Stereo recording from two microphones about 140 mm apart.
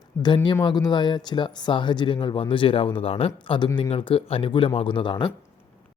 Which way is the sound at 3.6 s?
25° left (ahead or behind).